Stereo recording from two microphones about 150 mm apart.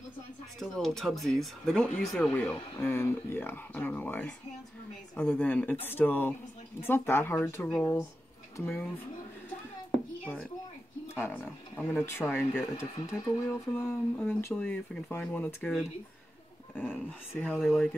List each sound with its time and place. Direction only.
0.6 s speech: centre (ahead or behind)
11.1 s speech: 15° left (ahead or behind)
16.7 s speech: 10° left (ahead or behind)
17.6 s speech: 5° right (ahead or behind)